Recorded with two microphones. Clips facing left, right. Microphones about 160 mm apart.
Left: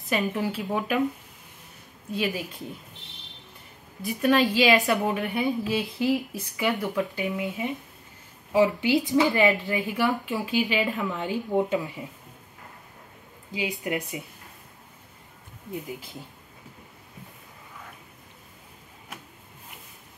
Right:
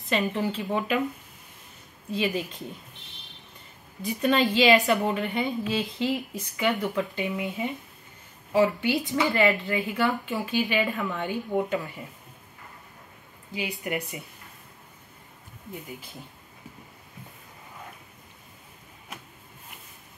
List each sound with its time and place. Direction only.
0.1 s a woman's voice: 5° left (ahead or behind)
2.0 s a woman's voice: 5° left (ahead or behind)
4.0 s a woman's voice: 5° left (ahead or behind)
9.2 s speech: 15° left (ahead or behind)
13.5 s speech: 15° left (ahead or behind)